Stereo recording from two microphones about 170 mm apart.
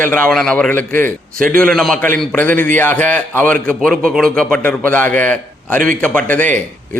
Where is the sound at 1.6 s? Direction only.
Centre (ahead or behind).